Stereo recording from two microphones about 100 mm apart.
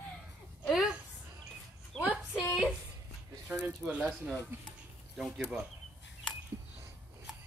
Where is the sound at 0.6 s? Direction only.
Centre (ahead or behind).